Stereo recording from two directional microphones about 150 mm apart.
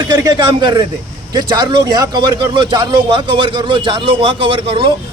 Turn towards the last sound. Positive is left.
turn(degrees=-35)  # may be behind; listen again after turning